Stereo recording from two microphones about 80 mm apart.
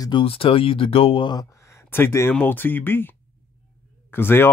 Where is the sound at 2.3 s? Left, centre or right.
Left.